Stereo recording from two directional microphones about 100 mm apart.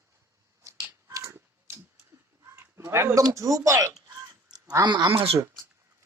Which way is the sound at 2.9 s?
25° right (ahead or behind).